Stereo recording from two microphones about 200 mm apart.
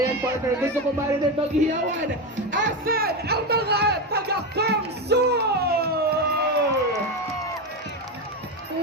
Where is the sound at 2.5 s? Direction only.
60° right (ahead or behind).